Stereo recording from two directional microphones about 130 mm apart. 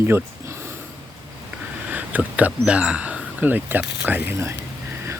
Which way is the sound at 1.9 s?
10° right (ahead or behind).